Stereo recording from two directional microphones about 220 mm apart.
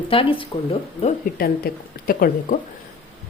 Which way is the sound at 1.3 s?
40° left (ahead or behind).